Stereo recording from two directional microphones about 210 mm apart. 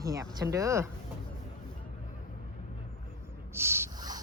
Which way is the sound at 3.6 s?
10° right (ahead or behind).